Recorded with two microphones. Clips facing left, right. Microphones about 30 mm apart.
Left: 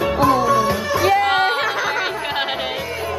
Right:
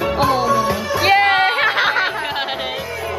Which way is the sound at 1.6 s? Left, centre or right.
Right.